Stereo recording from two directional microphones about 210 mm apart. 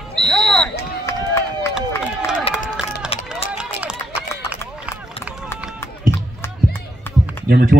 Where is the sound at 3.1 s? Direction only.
30° left (ahead or behind).